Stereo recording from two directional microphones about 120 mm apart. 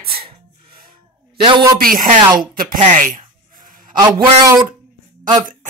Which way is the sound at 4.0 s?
30° right (ahead or behind).